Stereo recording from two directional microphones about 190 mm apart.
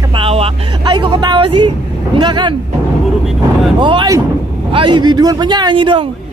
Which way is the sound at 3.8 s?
25° right (ahead or behind).